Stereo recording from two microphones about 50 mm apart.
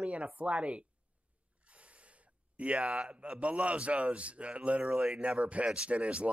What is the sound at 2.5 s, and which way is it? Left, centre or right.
Speech, right.